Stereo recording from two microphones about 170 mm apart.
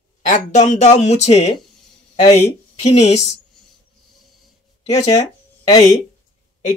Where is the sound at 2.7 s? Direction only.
40° left (ahead or behind).